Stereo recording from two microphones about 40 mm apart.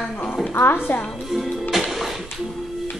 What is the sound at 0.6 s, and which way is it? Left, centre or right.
Speech, left.